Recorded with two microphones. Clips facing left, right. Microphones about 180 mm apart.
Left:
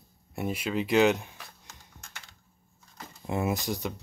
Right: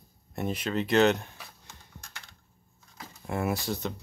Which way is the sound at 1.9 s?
Centre (ahead or behind).